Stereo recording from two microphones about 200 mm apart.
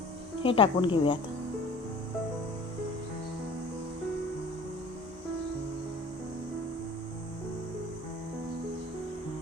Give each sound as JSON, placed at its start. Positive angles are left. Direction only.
{"t": 0.4, "sound": "speech", "side_deg": 25}